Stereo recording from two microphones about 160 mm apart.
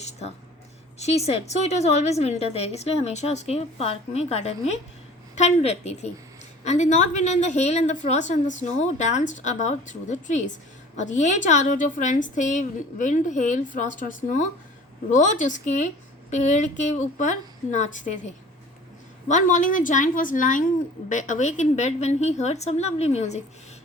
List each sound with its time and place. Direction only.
0.9 s a woman's voice: 40° left (ahead or behind)
19.3 s a woman's voice: 50° left (ahead or behind)